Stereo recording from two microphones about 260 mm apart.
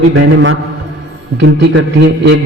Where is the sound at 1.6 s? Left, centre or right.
Right.